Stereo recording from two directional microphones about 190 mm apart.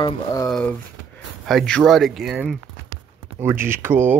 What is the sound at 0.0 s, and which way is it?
Speech, 20° left (ahead or behind).